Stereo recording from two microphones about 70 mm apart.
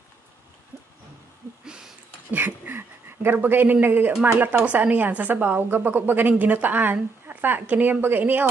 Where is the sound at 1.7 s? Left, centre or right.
Centre.